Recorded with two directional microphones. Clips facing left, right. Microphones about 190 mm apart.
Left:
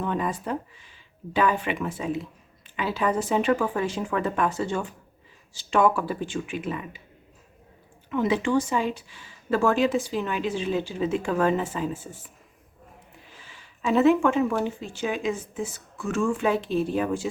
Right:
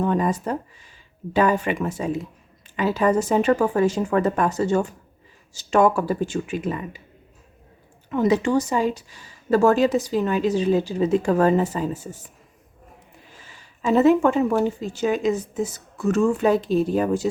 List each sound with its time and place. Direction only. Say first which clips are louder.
0.0 s a woman's voice: right 6 dB; 40° right (ahead or behind)
8.1 s a woman's voice: right 4 dB; 40° right (ahead or behind)
13.4 s a woman's voice: right 3 dB; 40° right (ahead or behind)